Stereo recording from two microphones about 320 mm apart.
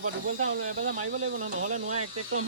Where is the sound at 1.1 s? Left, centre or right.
Right.